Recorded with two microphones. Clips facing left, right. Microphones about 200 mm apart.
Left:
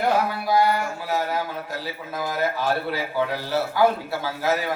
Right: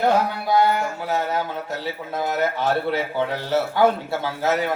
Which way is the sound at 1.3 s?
25° right (ahead or behind).